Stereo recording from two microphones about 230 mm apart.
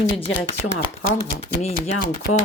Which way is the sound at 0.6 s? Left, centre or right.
Left.